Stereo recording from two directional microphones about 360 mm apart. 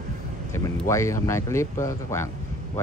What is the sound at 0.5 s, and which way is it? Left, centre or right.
Speech, centre.